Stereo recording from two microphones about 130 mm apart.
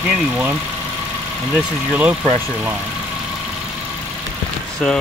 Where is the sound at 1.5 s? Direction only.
10° right (ahead or behind).